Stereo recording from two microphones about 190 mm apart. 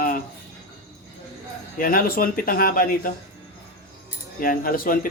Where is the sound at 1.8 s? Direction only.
50° left (ahead or behind).